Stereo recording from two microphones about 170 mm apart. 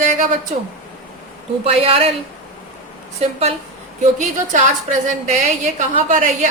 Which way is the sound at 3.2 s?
35° right (ahead or behind).